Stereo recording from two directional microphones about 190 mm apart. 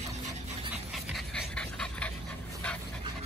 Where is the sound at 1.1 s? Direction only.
5° left (ahead or behind).